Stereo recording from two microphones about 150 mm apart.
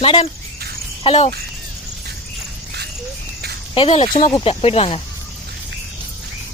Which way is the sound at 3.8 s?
40° left (ahead or behind).